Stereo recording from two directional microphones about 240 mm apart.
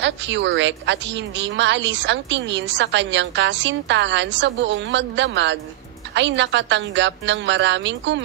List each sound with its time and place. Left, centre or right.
0.0 s a woman's voice: right